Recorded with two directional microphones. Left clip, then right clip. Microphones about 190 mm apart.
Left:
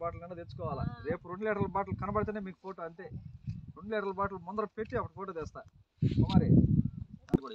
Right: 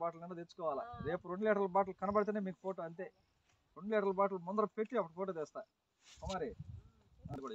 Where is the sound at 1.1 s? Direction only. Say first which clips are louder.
Left 1 dB; 40° right (ahead or behind).